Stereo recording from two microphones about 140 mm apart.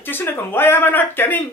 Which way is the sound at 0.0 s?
15° left (ahead or behind).